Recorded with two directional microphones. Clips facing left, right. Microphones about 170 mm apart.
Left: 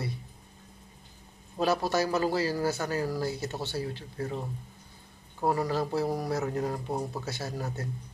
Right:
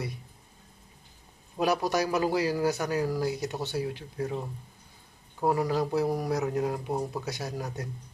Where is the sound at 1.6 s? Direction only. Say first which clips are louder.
Even; 15° right (ahead or behind).